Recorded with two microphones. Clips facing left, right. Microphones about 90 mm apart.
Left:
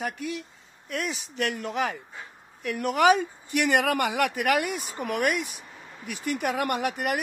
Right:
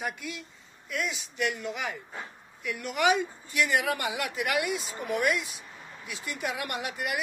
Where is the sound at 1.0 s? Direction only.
45° left (ahead or behind).